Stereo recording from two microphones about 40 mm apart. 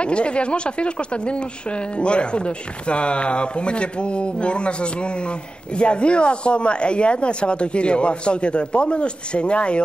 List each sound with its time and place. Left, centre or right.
0.0 s speech: left